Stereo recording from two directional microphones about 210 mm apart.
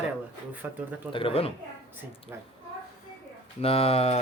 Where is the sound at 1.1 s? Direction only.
25° left (ahead or behind).